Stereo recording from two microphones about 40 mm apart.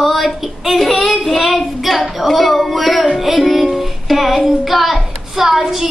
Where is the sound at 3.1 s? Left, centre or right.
Centre.